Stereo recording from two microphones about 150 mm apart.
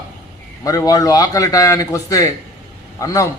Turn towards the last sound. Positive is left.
turn(degrees=20)  # may be behind; listen again after turning